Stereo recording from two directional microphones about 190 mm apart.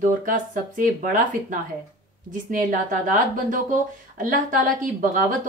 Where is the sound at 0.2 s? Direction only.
45° right (ahead or behind).